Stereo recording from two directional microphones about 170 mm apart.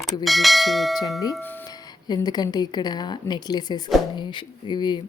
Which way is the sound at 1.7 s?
25° left (ahead or behind).